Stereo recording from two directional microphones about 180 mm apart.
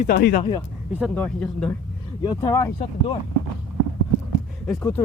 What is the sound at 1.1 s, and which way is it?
Speech, 5° left (ahead or behind).